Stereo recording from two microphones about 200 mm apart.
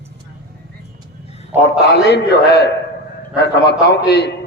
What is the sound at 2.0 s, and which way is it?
A man's voice, 55° left (ahead or behind).